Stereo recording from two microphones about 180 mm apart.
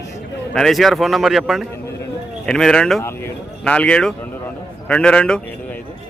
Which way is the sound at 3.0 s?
10° left (ahead or behind).